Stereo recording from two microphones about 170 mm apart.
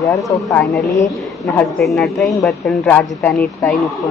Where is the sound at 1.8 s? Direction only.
Centre (ahead or behind).